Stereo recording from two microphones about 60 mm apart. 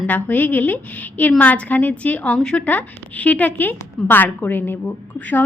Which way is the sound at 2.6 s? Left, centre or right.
Left.